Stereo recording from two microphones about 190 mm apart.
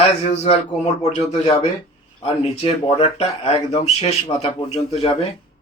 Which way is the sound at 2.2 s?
30° left (ahead or behind).